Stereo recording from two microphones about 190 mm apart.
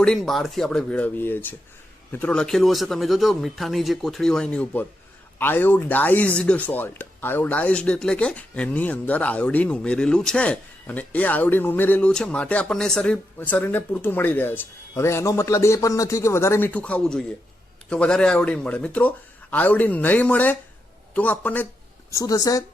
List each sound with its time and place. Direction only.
0.0 s speech: centre (ahead or behind); by 22.6 s 20° left (ahead or behind)